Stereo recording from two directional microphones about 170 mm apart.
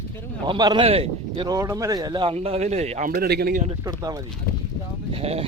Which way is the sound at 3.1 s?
65° right (ahead or behind).